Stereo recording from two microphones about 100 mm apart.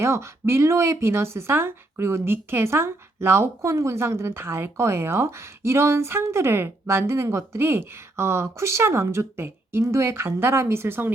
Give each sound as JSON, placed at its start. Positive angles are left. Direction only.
{"t": 0.0, "sound": "speech", "side_deg": -25}